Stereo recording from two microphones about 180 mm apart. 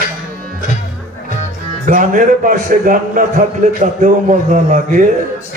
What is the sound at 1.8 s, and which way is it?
A man's voice, 45° right (ahead or behind).